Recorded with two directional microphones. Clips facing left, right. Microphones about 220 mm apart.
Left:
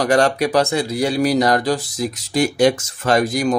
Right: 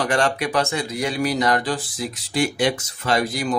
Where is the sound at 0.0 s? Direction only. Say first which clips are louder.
Left 5 dB; 40° left (ahead or behind).